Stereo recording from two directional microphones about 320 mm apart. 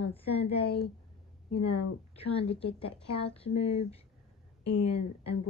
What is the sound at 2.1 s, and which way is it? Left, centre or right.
Speech, centre.